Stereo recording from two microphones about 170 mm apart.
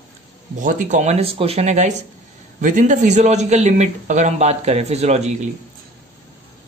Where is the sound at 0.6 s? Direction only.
50° right (ahead or behind).